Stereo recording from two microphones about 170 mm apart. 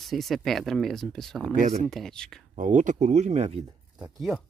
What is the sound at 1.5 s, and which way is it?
Speech, 45° right (ahead or behind).